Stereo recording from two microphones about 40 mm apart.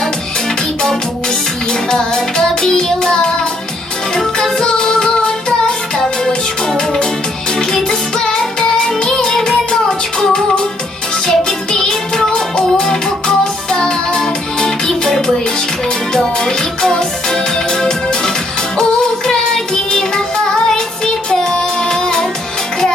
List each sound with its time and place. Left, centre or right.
1.9 s music: centre
2.6 s child singing: centre
4.4 s music: centre